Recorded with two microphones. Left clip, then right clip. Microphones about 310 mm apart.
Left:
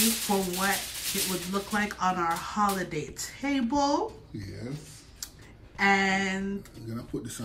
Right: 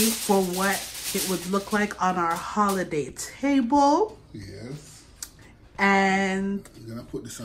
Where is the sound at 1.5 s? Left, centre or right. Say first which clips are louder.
Right 6 dB; centre.